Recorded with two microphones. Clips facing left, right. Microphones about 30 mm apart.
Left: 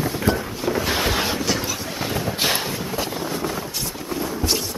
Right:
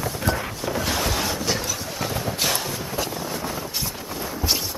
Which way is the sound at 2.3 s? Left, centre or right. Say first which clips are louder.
Left 3 dB; left.